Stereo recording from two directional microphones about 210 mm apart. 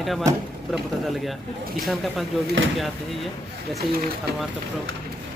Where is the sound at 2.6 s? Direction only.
65° right (ahead or behind).